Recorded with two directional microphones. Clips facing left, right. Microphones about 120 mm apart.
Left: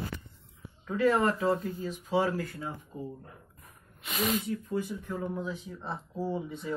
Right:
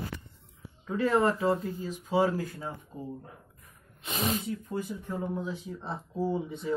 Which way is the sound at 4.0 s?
30° right (ahead or behind).